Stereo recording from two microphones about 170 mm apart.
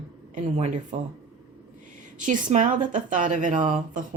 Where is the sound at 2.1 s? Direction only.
50° right (ahead or behind).